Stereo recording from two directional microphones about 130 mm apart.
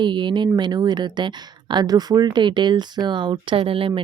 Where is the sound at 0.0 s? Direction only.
35° right (ahead or behind).